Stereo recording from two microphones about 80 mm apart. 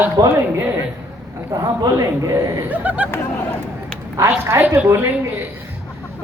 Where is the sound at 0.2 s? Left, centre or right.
Right.